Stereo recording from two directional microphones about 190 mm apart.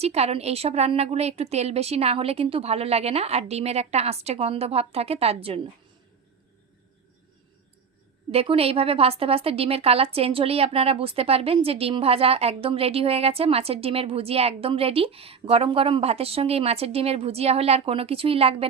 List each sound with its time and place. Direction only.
0.0 s a woman's voice: 35° right (ahead or behind)
8.3 s a woman's voice: 30° right (ahead or behind)